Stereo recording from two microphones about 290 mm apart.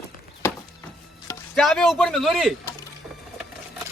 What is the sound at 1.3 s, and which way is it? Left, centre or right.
Speech, centre.